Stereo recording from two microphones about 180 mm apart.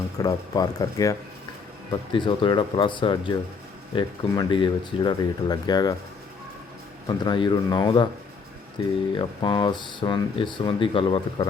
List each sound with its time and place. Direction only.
0.2 s speech: 20° left (ahead or behind)
7.3 s speech: 25° left (ahead or behind)